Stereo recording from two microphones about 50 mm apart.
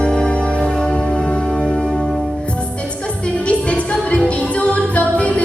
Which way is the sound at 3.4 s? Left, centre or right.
Left.